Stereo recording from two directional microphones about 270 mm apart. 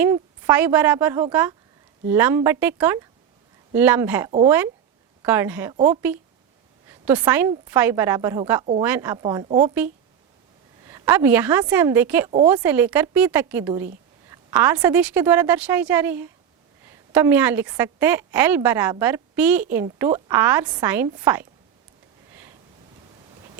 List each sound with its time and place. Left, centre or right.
0.0 s a woman's voice: centre
5.7 s speech: centre
7.0 s a woman's voice: centre
10.8 s a woman's voice: centre